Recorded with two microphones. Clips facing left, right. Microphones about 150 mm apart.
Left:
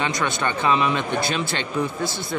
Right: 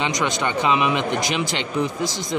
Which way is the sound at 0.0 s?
20° right (ahead or behind).